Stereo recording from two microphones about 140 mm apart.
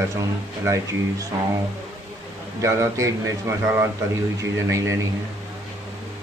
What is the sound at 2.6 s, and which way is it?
A man's voice, 20° right (ahead or behind).